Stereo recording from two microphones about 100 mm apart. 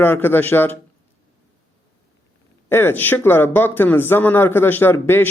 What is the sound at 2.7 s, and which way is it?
Speech, 20° left (ahead or behind).